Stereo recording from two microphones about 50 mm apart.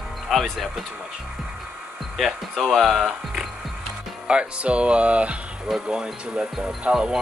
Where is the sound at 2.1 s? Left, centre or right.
Centre.